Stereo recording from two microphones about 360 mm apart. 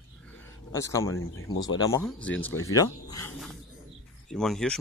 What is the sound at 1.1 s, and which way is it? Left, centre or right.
Speech, left.